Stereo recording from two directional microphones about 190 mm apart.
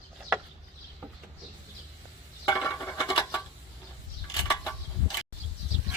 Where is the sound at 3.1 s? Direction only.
20° left (ahead or behind).